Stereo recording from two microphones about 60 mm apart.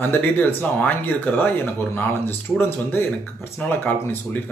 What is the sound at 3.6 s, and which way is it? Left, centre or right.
Speech, left.